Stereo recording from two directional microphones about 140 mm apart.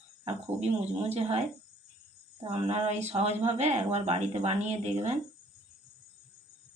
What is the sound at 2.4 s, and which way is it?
A woman's voice, 45° right (ahead or behind).